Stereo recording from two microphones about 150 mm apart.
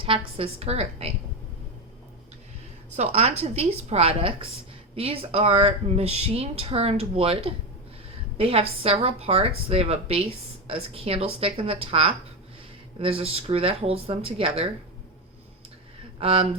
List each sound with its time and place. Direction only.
0.0 s a woman's voice: 40° right (ahead or behind)
2.9 s a woman's voice: 45° right (ahead or behind)
16.2 s a woman's voice: 40° right (ahead or behind)